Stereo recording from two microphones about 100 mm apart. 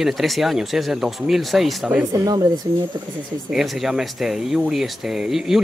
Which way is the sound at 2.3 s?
40° right (ahead or behind).